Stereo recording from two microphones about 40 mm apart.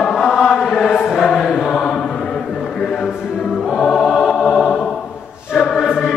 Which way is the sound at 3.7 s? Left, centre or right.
Centre.